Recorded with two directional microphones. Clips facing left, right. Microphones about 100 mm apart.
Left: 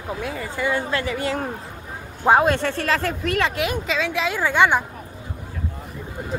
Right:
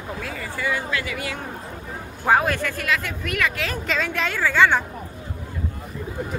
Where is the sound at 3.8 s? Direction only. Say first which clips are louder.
Left 2 dB; centre (ahead or behind).